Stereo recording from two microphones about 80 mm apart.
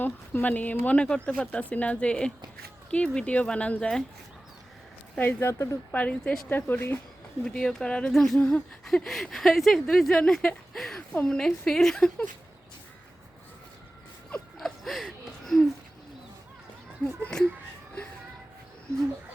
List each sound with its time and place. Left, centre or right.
0.0 s speech: left
5.1 s speech: centre
5.4 s speech: left
5.9 s speech: centre
7.4 s speech: centre
8.4 s speech: centre
8.8 s speech: centre
11.1 s speech: centre
14.6 s a sound: centre